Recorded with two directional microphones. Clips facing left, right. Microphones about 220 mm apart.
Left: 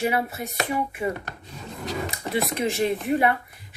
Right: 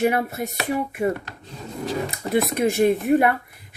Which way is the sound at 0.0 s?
45° right (ahead or behind).